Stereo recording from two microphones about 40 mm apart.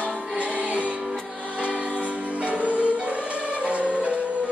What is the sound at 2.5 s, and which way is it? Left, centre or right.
Music, right.